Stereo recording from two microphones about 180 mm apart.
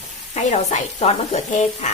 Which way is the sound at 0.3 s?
40° left (ahead or behind).